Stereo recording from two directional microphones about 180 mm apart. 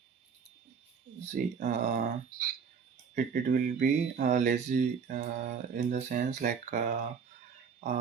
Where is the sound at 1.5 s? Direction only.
40° right (ahead or behind).